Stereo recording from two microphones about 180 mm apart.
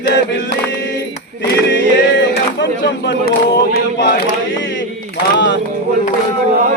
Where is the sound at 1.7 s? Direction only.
75° left (ahead or behind); by 4.2 s 60° left (ahead or behind).